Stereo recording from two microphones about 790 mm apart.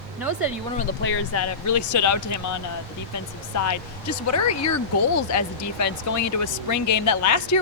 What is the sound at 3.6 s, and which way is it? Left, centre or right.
Speech, left.